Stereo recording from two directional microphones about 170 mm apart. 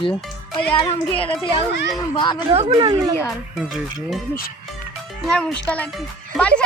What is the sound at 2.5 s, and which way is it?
Speech, 25° right (ahead or behind).